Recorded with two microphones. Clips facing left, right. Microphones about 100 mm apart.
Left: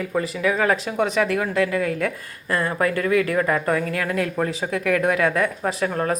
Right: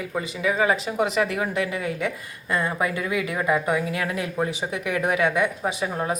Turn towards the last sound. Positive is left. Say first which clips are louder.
# left 3 dB
turn(degrees=-10)  # may be behind; listen again after turning